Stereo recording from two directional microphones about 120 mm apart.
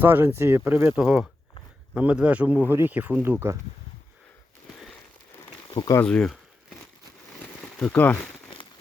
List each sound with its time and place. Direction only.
0.0 s speech: 15° right (ahead or behind)
0.9 s speech: 10° right (ahead or behind)
5.7 s speech: 35° left (ahead or behind)
6.0 s speech: 10° left (ahead or behind)
7.4 s a sound: 10° left (ahead or behind)